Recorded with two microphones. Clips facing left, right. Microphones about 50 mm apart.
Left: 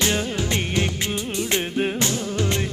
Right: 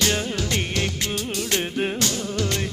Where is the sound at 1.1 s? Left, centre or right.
Left.